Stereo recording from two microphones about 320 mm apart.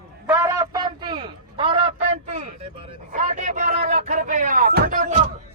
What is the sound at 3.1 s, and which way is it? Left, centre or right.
Speech, right.